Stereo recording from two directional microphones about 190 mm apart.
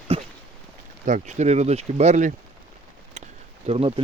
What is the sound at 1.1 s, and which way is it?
Speech, 40° right (ahead or behind).